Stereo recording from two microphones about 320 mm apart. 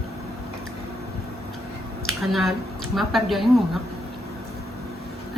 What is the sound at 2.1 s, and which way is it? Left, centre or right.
A woman's voice, centre.